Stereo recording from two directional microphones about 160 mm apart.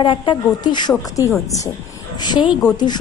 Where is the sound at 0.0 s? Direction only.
30° left (ahead or behind).